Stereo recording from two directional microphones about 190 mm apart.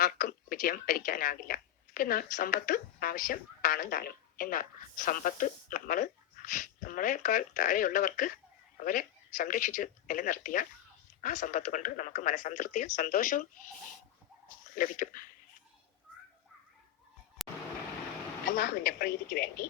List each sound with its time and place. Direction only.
0.0 s a woman's voice: 50° left (ahead or behind)
14.8 s speech: 45° left (ahead or behind)
17.4 s vehicle: centre (ahead or behind)
18.5 s speech: 50° left (ahead or behind)